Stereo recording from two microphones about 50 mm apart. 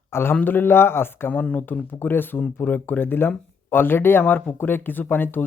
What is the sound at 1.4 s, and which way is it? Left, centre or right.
Speech, left.